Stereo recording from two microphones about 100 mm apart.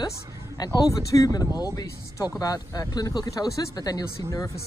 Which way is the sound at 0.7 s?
35° left (ahead or behind).